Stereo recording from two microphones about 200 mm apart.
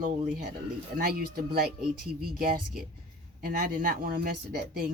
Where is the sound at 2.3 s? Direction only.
45° right (ahead or behind).